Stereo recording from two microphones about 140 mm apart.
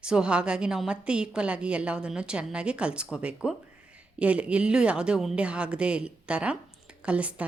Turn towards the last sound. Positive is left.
turn(degrees=-10)  # may be behind; listen again after turning